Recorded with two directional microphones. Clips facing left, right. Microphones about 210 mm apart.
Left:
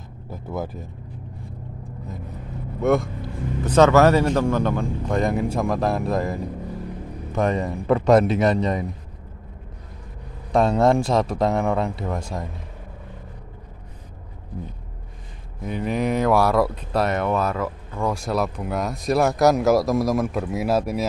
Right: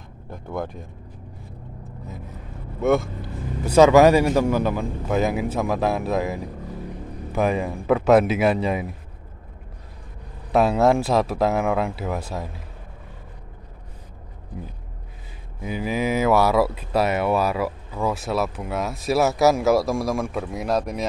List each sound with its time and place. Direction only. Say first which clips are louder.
0.3 s speech: even; 5° left (ahead or behind)
2.8 s speech: even; centre (ahead or behind)
10.5 s speech: even; 5° right (ahead or behind)
15.6 s speech: left 1 dB; 5° right (ahead or behind)